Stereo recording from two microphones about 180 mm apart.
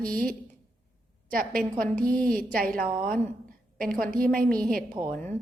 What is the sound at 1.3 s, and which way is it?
Speech, 50° right (ahead or behind).